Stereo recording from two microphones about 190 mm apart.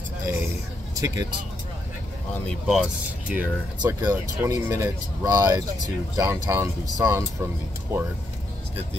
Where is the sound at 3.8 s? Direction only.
20° right (ahead or behind).